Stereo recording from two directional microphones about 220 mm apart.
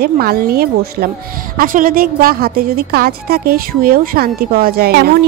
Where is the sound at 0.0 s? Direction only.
45° right (ahead or behind).